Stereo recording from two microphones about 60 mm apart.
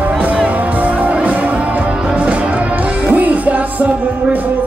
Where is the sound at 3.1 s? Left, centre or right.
Right.